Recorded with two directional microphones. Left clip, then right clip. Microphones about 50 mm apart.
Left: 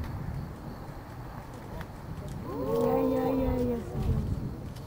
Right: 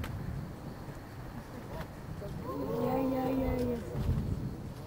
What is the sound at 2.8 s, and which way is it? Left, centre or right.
Cattle, centre.